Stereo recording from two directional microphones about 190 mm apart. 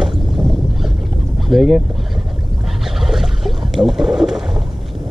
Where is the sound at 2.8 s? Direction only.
Centre (ahead or behind).